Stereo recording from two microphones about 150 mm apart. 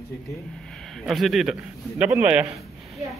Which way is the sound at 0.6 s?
5° left (ahead or behind).